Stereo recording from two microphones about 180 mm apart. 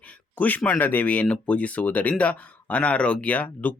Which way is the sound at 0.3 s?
10° left (ahead or behind).